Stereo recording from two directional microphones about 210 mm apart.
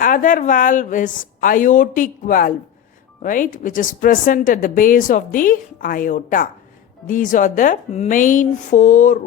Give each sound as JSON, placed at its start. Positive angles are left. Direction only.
{"t": 0.0, "sound": "a woman's voice", "side_deg": 40}